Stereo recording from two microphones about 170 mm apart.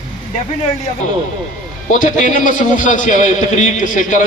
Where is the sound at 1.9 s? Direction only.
50° left (ahead or behind).